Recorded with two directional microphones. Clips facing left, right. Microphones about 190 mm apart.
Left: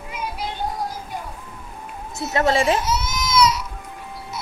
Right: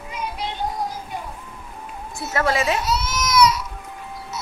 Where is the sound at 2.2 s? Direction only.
20° left (ahead or behind).